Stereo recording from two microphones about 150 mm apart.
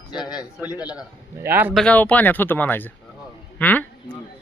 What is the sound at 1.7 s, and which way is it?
A man's voice, 5° left (ahead or behind).